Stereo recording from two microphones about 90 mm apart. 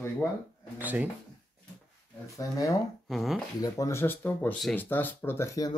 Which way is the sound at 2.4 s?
40° left (ahead or behind).